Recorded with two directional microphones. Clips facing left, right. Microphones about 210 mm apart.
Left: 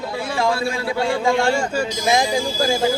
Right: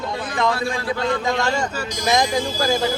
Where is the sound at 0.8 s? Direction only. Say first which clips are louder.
Left 3 dB; 10° left (ahead or behind).